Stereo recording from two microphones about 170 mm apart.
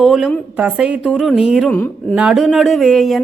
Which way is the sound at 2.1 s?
5° right (ahead or behind).